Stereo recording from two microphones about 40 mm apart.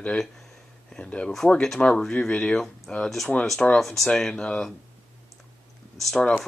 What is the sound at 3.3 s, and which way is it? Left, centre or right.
Speech, centre.